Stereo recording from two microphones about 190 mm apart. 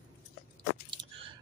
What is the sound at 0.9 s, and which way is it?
Chewing, 30° right (ahead or behind).